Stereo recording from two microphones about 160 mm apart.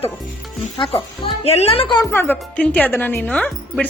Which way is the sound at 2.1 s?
15° left (ahead or behind).